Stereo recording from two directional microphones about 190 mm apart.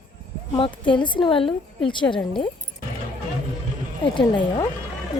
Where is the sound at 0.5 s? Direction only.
25° left (ahead or behind).